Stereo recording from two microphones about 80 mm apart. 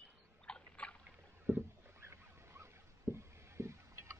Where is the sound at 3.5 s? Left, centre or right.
Right.